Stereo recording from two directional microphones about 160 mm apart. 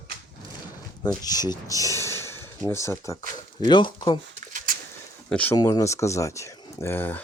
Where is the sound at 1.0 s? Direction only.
25° left (ahead or behind).